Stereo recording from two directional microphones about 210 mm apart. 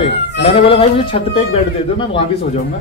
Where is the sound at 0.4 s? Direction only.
25° left (ahead or behind).